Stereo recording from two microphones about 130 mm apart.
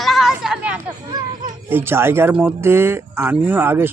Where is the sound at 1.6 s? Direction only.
15° right (ahead or behind).